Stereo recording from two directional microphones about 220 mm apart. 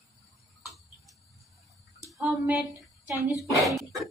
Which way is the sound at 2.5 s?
10° right (ahead or behind).